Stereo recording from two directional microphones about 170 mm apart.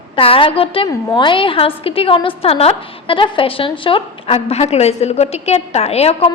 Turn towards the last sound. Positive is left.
turn(degrees=35)  # may be behind; listen again after turning